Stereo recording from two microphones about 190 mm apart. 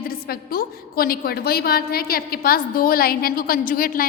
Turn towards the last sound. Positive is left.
turn(degrees=50)  # may be behind; listen again after turning